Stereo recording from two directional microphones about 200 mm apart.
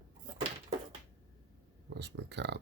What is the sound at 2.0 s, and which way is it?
Speech, 60° right (ahead or behind).